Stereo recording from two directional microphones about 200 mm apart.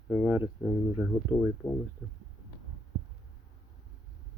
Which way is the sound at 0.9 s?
15° left (ahead or behind).